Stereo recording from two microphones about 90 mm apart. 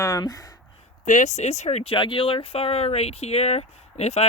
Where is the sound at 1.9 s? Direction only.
70° left (ahead or behind); by 2.8 s 90° left.